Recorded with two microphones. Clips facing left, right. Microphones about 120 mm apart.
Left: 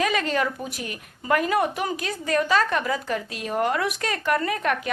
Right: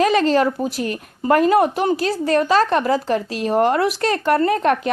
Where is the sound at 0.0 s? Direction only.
35° right (ahead or behind).